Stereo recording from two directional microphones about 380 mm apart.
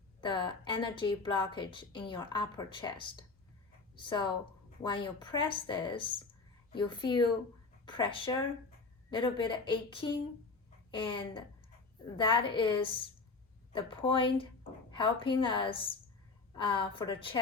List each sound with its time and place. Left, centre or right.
0.2 s a woman's voice: centre